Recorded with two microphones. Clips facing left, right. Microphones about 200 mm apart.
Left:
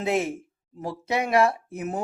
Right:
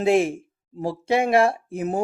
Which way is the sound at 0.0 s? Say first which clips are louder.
Right 6 dB; 30° right (ahead or behind).